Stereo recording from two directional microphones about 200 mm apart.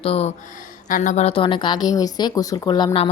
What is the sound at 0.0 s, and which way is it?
A woman's voice, 30° left (ahead or behind).